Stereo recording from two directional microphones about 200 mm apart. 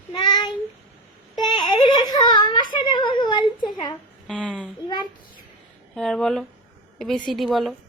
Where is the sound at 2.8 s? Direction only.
25° left (ahead or behind).